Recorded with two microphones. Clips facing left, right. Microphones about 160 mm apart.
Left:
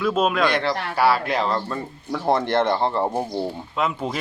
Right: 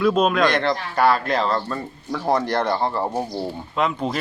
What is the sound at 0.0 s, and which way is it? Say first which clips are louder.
A man's voice: right 2 dB; centre (ahead or behind).